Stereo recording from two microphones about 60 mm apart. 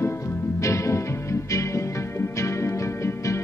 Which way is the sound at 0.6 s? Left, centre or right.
Left.